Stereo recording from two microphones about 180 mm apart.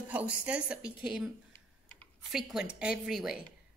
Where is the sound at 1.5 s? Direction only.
5° left (ahead or behind).